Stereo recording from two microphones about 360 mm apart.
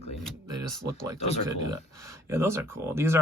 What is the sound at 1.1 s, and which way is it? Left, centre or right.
Speech, centre.